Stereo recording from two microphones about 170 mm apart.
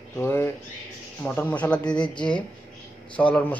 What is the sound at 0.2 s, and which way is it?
A man's voice, 15° left (ahead or behind).